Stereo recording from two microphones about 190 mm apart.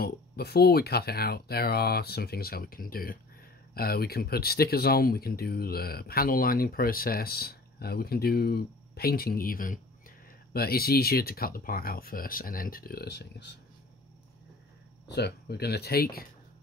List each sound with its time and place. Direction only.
0.0 s speech: 55° left (ahead or behind)
15.0 s speech: 60° left (ahead or behind)